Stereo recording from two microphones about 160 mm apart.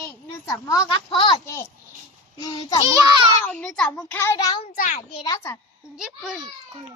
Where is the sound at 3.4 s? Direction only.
5° left (ahead or behind); by 4.6 s 25° left (ahead or behind).